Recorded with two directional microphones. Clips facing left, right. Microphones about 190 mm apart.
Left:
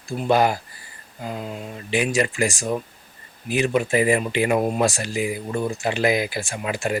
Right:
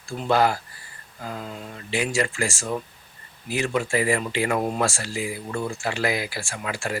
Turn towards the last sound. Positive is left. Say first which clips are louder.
# left 4 dB
turn(degrees=20)  # may be behind; listen again after turning